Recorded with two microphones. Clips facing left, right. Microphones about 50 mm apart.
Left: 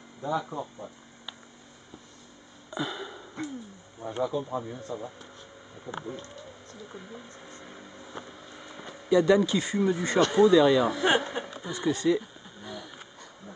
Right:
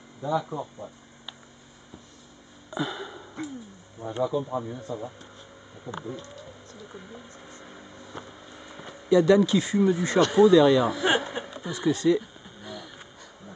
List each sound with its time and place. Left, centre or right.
0.2 s speech: centre
2.7 s a sound: centre
4.0 s speech: right
4.4 s speech: centre
5.9 s speech: left
6.9 s speech: centre